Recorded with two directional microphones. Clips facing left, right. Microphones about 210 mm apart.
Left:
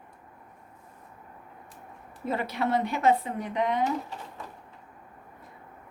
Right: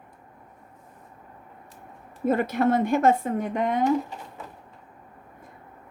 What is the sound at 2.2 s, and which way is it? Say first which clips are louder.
Speech: right 7 dB; 50° right (ahead or behind).